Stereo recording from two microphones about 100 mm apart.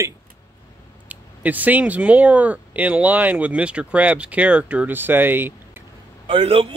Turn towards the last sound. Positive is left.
turn(degrees=-70)  # may be behind; listen again after turning